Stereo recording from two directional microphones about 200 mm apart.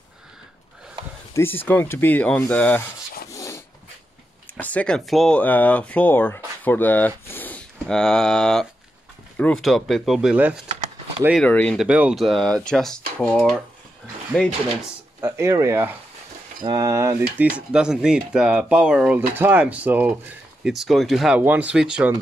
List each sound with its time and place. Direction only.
1.3 s speech: 10° left (ahead or behind)
3.3 s dog: 15° left (ahead or behind)
4.6 s speech: 5° left (ahead or behind)
11.4 s speech: 5° left (ahead or behind)
15.1 s speech: 15° right (ahead or behind)